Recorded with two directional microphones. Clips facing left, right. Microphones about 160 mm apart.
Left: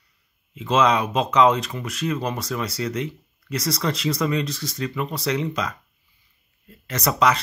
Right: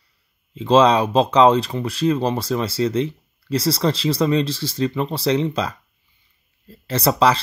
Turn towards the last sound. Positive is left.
turn(degrees=-30)  # may be behind; listen again after turning